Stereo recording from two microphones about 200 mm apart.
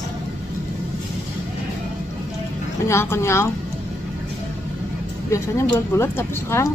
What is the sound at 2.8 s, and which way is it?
Speech, 15° left (ahead or behind).